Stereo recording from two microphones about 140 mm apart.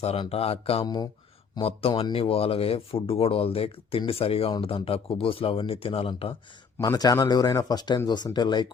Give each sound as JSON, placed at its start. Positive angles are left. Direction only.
{"t": 0.0, "sound": "speech", "side_deg": 45}
{"t": 6.7, "sound": "speech", "side_deg": 25}